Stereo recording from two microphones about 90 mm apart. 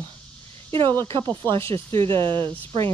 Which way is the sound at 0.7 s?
80° right.